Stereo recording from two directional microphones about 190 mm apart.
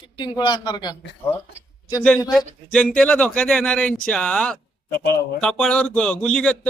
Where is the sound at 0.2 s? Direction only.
25° left (ahead or behind).